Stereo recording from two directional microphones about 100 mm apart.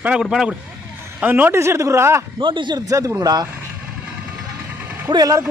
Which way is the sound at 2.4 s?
55° right (ahead or behind).